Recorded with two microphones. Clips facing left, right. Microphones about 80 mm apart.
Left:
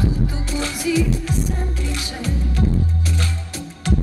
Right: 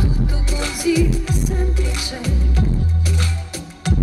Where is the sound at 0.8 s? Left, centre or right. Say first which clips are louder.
Right 3 dB; centre.